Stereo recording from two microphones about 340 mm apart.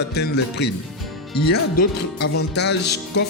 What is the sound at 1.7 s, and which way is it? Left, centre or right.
Speech, left.